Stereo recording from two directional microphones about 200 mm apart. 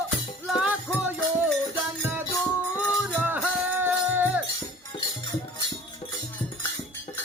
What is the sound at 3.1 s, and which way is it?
Music, 10° right (ahead or behind).